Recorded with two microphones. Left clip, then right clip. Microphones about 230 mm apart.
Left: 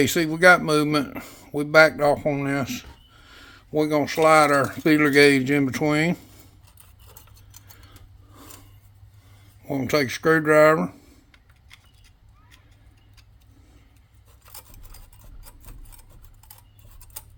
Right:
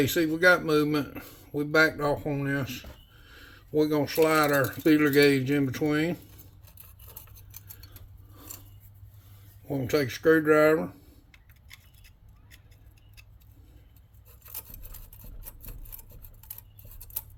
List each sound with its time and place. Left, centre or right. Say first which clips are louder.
0.0 s speech: left 5 dB; left
9.6 s speech: left 5 dB; left
11.3 s keys jangling: right 3 dB; centre